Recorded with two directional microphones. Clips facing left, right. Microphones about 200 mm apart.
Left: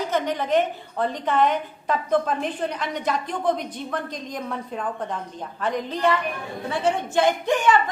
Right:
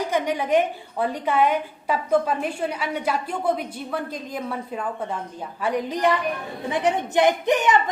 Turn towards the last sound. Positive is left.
turn(degrees=-20)  # may be behind; listen again after turning